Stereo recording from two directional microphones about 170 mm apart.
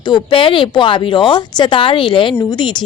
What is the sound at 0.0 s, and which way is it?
Speech, 25° left (ahead or behind).